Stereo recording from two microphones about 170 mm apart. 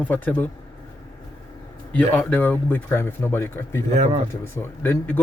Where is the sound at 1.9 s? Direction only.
10° left (ahead or behind).